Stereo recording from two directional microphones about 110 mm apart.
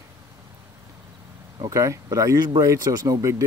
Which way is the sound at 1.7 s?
25° right (ahead or behind).